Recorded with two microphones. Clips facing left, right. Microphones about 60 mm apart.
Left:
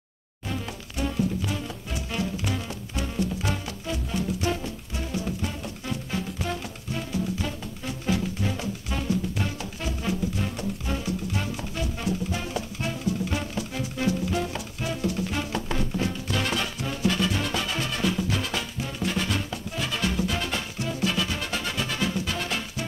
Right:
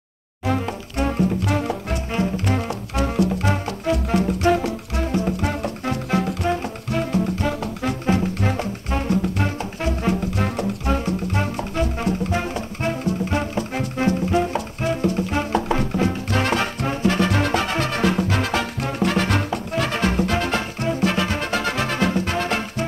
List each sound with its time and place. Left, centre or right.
0.5 s music: right
2.1 s music: right
3.0 s music: right
5.4 s music: right